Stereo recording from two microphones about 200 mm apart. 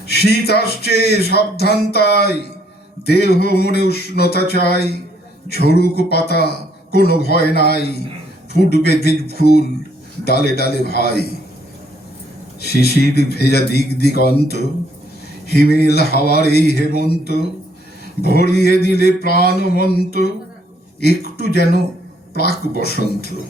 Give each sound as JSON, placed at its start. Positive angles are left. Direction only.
{"t": 0.1, "sound": "speech", "side_deg": 55}
{"t": 12.6, "sound": "speech", "side_deg": 55}